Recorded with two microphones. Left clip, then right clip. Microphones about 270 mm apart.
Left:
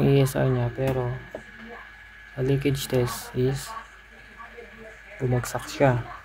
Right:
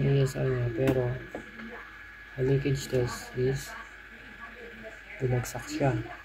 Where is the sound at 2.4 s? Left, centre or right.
Left.